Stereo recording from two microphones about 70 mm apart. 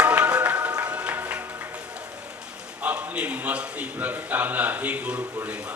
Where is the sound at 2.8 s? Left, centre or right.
Right.